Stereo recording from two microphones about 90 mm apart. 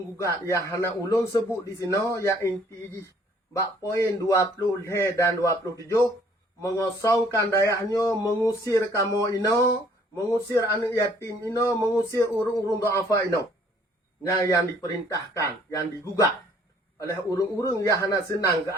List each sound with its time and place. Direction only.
0.4 s speech: 35° left (ahead or behind)
3.5 s speech: 35° left (ahead or behind)